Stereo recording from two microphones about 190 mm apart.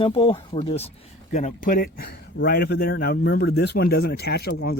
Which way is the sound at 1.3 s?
40° left (ahead or behind).